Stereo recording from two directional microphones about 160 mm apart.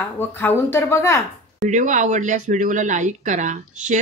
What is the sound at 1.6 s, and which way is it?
Speech, 50° right (ahead or behind).